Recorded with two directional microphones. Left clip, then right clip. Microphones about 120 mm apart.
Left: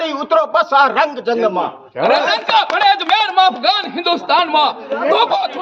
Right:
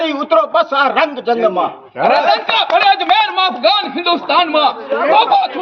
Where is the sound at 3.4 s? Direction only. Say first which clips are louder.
Even; 45° left (ahead or behind).